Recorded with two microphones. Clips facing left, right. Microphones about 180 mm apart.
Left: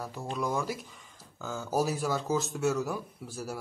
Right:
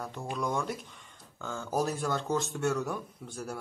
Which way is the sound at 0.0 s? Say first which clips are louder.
Left 1 dB; 5° left (ahead or behind).